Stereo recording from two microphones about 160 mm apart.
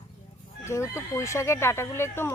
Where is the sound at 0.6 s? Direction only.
15° left (ahead or behind).